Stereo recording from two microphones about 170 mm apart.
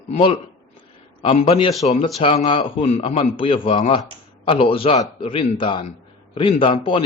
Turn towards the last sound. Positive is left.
turn(degrees=30)  # may be behind; listen again after turning